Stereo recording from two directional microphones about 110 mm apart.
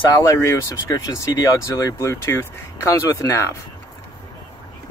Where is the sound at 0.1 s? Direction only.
25° left (ahead or behind).